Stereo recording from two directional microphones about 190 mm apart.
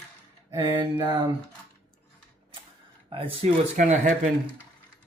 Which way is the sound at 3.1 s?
30° right (ahead or behind).